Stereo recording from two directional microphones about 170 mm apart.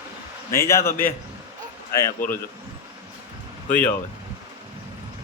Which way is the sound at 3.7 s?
10° left (ahead or behind).